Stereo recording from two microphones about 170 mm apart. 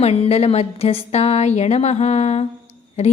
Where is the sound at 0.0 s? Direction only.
40° left (ahead or behind).